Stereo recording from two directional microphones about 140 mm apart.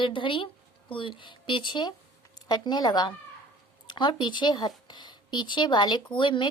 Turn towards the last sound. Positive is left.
turn(degrees=35)  # may be behind; listen again after turning